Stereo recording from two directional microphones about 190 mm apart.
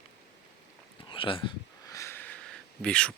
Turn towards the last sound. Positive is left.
turn(degrees=5)  # may be behind; listen again after turning